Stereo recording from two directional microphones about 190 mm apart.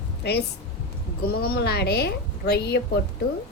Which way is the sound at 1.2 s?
55° left (ahead or behind).